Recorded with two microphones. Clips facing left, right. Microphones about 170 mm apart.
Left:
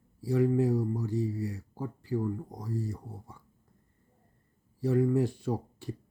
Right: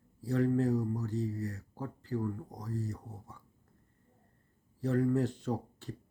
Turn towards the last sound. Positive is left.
turn(degrees=10)  # may be behind; listen again after turning